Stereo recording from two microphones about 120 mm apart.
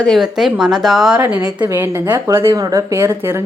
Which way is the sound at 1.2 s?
15° right (ahead or behind).